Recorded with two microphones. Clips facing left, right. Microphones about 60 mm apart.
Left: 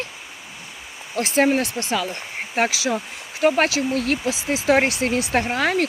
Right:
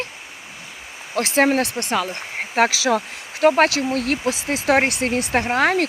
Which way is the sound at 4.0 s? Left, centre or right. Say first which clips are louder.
Right 1 dB; right.